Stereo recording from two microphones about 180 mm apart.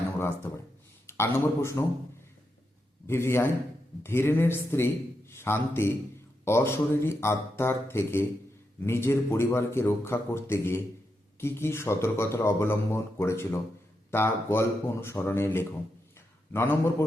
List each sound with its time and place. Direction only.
1.0 s speech: 15° left (ahead or behind)
3.1 s speech: 15° left (ahead or behind)